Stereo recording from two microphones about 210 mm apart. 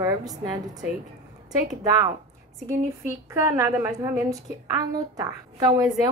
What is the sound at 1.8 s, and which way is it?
Speech, 15° right (ahead or behind).